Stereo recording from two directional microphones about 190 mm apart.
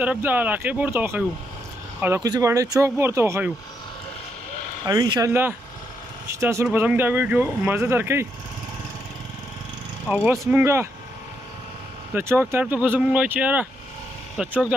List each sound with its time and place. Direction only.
0.0 s speech: 10° right (ahead or behind)
4.8 s speech: 20° right (ahead or behind)
10.0 s speech: 10° right (ahead or behind)
12.1 s speech: 10° right (ahead or behind)